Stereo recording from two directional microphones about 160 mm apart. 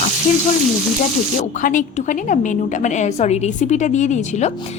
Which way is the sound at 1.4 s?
55° left (ahead or behind).